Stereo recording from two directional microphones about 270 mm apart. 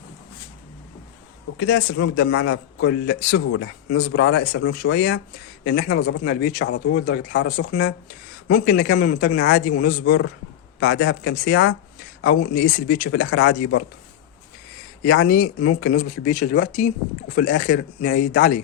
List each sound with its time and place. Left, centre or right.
1.5 s a man's voice: left
10.0 s a man's voice: left
13.2 s a man's voice: left
15.2 s speech: left